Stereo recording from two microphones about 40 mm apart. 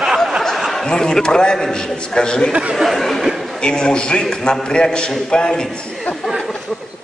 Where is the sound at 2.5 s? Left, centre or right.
Right.